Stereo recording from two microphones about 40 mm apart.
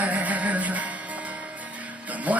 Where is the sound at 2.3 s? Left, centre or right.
Right.